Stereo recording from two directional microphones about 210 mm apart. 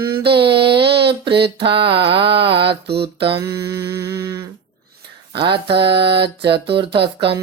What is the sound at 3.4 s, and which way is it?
Mantra, 15° right (ahead or behind).